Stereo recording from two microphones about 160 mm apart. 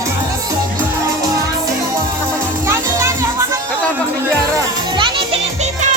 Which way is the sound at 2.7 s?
15° right (ahead or behind).